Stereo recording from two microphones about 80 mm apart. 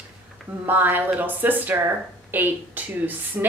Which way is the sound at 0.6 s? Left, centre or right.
Right.